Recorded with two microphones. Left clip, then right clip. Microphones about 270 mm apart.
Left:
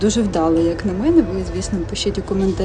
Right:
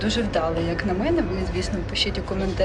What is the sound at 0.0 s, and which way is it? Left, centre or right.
Speech, centre.